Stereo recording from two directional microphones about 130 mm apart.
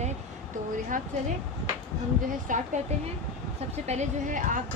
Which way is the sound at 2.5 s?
90° right.